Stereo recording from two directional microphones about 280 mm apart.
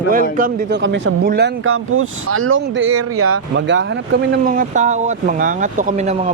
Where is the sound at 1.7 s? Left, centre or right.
Right.